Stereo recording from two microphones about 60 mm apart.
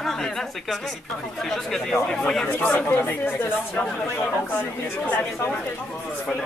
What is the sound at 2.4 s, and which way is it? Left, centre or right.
Speech, left.